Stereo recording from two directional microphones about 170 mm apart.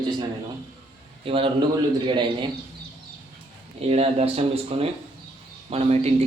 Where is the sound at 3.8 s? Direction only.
35° right (ahead or behind).